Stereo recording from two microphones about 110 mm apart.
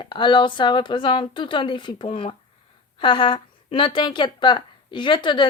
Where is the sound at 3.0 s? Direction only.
45° left (ahead or behind).